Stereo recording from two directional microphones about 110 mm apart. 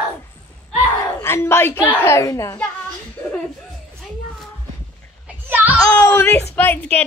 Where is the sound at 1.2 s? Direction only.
20° left (ahead or behind).